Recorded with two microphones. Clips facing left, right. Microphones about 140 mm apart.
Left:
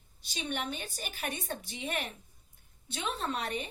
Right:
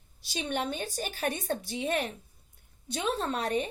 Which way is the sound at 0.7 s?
35° right (ahead or behind).